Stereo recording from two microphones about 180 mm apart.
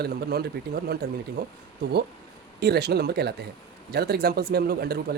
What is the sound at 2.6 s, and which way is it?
Speech, 65° right (ahead or behind).